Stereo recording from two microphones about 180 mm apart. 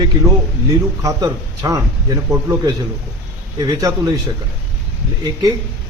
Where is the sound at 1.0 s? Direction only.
20° right (ahead or behind).